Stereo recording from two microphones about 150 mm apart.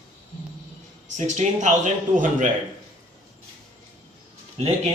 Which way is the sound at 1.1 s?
55° right (ahead or behind).